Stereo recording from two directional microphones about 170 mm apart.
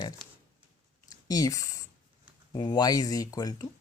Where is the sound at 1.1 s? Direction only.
20° left (ahead or behind).